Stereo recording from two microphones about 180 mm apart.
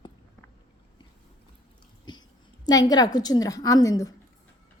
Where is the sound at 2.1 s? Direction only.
25° left (ahead or behind).